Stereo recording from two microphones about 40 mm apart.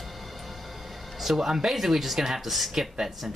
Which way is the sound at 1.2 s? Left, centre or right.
Centre.